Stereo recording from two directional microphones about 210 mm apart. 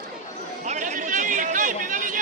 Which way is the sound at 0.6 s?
35° right (ahead or behind).